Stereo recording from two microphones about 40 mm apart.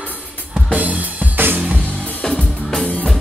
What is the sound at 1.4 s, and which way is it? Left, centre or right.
Music, right.